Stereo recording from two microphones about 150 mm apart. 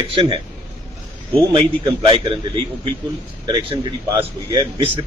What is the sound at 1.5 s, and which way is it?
A man's voice, 35° right (ahead or behind).